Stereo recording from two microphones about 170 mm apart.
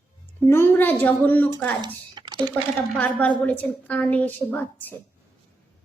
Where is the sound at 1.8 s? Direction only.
25° right (ahead or behind).